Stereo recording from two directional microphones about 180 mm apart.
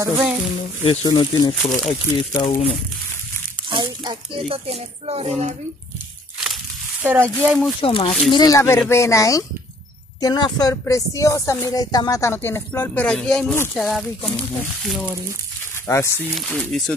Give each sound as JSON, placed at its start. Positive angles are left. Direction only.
{"t": 0.0, "sound": "speech", "side_deg": -5}
{"t": 1.0, "sound": "speech", "side_deg": 25}
{"t": 1.5, "sound": "speech", "side_deg": 0}
{"t": 2.4, "sound": "speech", "side_deg": 35}
{"t": 3.7, "sound": "speech", "side_deg": -25}
{"t": 6.4, "sound": "a sound", "side_deg": -5}
{"t": 7.4, "sound": "speech", "side_deg": 0}
{"t": 7.8, "sound": "speech", "side_deg": 30}